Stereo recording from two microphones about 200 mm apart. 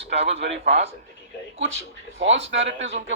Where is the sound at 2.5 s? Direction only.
65° right (ahead or behind).